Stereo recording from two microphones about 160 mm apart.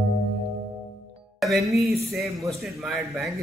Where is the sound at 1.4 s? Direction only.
Centre (ahead or behind).